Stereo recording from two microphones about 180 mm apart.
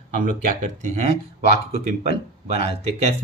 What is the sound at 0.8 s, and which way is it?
Speech, 40° right (ahead or behind).